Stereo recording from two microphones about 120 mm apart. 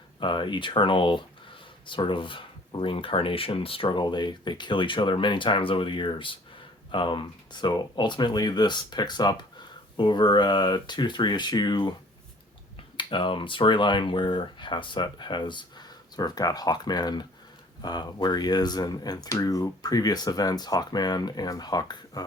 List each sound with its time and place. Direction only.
0.2 s speech: 40° left (ahead or behind)
13.0 s speech: 45° left (ahead or behind)